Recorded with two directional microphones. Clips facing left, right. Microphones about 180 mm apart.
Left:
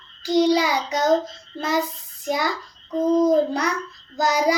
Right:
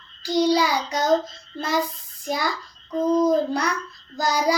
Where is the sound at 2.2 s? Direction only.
20° left (ahead or behind).